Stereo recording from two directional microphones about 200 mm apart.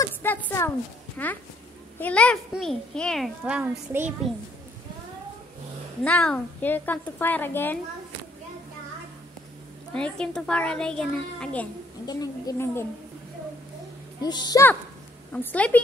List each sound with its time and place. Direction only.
0.0 s a sound: 10° left (ahead or behind)
1.1 s a woman's voice: 10° left (ahead or behind); by 4.1 s 10° right (ahead or behind)
6.0 s a woman's voice: 5° left (ahead or behind)
9.9 s a child's voice: 5° left (ahead or behind)
12.1 s a woman's voice: 20° left (ahead or behind)
14.2 s a woman's voice: 20° left (ahead or behind)